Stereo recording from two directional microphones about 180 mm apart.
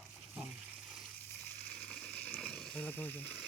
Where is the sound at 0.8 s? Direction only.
Centre (ahead or behind).